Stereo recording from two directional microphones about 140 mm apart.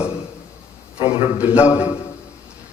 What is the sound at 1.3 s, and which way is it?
Speech, 10° right (ahead or behind).